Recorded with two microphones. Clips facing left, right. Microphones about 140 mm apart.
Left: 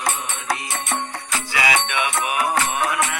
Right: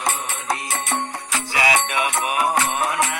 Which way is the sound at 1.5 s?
35° right (ahead or behind).